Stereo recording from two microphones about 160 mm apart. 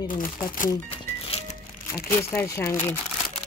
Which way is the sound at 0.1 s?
60° left (ahead or behind).